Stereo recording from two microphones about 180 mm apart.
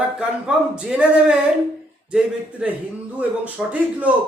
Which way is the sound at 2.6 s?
5° right (ahead or behind).